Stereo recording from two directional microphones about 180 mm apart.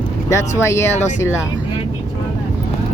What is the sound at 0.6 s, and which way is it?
Speech, 15° left (ahead or behind).